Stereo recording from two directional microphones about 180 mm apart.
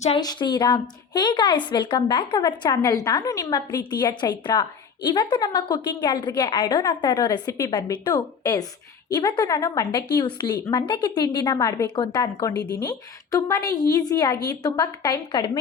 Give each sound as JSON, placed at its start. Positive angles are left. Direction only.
{"t": 0.2, "sound": "a woman's voice", "side_deg": 25}